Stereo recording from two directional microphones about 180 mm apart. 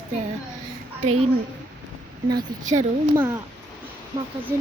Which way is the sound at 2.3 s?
20° right (ahead or behind).